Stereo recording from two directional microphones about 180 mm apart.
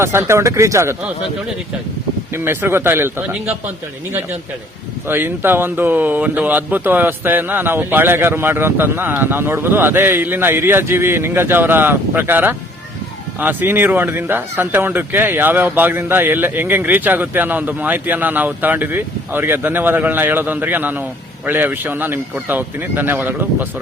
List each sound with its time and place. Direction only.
0.0 s speech: 15° right (ahead or behind)
2.3 s speech: 15° right (ahead or behind)
5.0 s speech: 10° right (ahead or behind)